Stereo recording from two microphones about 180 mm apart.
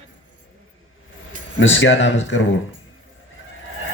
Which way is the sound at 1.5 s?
90° left.